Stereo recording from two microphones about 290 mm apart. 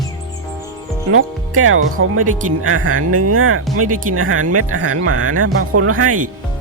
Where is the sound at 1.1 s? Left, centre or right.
Right.